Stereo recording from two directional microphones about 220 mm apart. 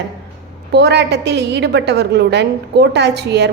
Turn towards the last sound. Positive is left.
turn(degrees=-50)  # may be behind; listen again after turning